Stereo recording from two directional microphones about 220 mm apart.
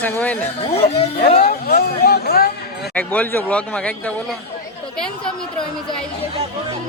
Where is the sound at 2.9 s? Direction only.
5° left (ahead or behind).